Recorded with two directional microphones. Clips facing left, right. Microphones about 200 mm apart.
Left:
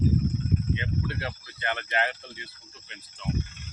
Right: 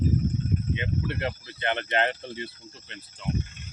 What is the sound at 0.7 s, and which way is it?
Speech, 20° right (ahead or behind).